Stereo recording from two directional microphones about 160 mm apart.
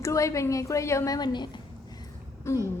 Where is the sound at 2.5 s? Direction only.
15° left (ahead or behind).